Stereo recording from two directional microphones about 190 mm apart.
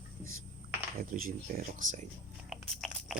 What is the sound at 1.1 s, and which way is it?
Speech, 45° right (ahead or behind).